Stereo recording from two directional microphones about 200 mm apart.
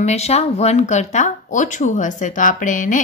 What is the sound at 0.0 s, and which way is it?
Speech, 35° left (ahead or behind).